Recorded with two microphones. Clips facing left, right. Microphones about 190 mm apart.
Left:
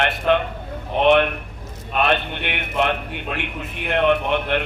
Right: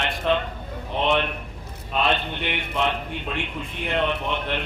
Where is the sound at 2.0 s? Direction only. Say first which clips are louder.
Left 3 dB; 60° left (ahead or behind).